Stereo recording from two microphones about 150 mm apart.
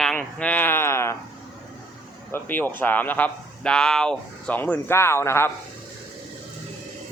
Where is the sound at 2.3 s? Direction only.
10° left (ahead or behind).